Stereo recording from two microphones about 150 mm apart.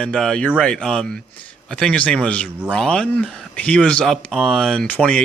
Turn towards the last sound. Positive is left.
turn(degrees=5)  # may be behind; listen again after turning